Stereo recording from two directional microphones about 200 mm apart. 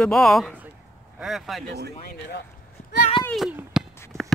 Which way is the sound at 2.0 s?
50° left (ahead or behind).